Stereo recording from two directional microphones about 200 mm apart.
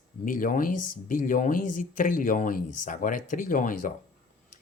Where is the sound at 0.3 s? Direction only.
40° left (ahead or behind).